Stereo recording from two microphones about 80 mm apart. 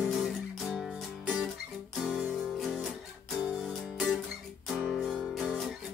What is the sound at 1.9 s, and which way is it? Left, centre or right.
Guitar, centre.